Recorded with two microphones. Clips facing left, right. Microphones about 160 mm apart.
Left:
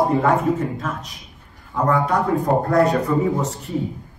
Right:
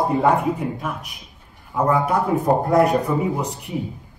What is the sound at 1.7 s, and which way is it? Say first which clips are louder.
A man's voice: even; 20° right (ahead or behind).